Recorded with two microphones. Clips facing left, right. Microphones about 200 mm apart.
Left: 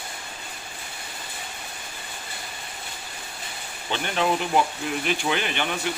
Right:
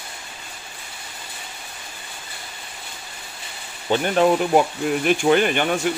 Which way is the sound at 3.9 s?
45° right (ahead or behind).